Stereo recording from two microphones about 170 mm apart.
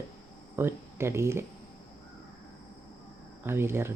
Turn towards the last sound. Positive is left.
turn(degrees=-15)  # may be behind; listen again after turning